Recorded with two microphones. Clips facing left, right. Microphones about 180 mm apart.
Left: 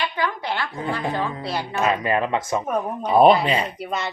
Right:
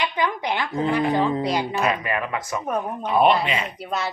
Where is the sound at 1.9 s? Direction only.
30° left (ahead or behind).